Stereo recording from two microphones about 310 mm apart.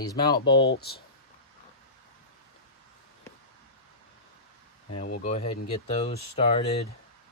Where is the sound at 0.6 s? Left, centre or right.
Left.